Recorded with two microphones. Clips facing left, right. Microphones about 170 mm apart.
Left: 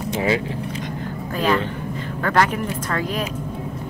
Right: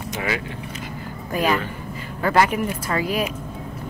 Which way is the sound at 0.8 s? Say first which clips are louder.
Left 4 dB; 10° right (ahead or behind).